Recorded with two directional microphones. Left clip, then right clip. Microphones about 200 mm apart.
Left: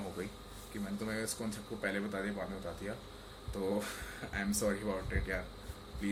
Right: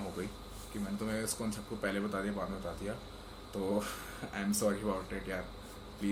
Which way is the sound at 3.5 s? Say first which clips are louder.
Right 1 dB; centre (ahead or behind).